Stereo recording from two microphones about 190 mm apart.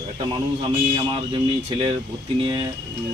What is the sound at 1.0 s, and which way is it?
Speech, 30° right (ahead or behind).